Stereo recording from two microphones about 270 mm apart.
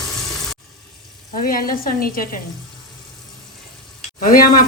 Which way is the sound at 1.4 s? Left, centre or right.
Left.